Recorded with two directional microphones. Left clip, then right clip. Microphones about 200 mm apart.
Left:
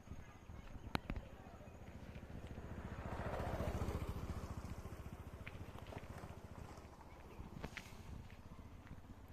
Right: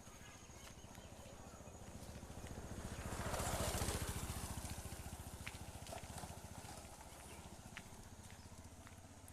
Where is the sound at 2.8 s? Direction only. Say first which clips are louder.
Even; 15° left (ahead or behind).